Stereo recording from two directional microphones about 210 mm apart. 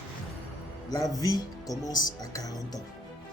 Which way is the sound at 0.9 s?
15° left (ahead or behind).